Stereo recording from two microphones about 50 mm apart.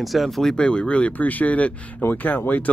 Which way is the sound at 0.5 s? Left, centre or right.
Centre.